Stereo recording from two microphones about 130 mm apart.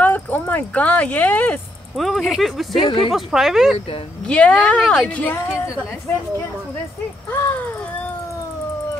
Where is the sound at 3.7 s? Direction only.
45° left (ahead or behind).